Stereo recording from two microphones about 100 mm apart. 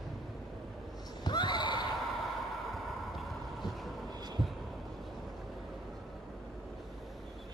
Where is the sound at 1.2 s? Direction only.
45° left (ahead or behind).